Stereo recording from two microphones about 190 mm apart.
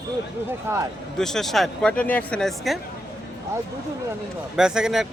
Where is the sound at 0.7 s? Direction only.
10° right (ahead or behind).